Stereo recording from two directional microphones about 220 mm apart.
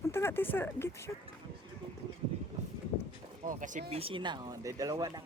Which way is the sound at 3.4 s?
35° right (ahead or behind).